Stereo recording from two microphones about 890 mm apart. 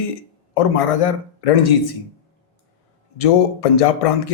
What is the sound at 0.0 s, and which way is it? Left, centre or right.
Speech, left.